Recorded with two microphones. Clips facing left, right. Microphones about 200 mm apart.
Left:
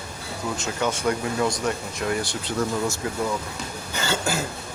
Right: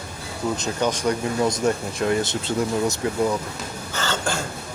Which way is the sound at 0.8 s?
15° right (ahead or behind).